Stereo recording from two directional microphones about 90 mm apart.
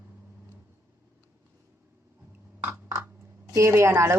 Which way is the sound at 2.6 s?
25° right (ahead or behind).